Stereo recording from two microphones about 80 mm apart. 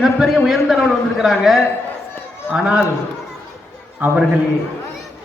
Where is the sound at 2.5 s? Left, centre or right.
Centre.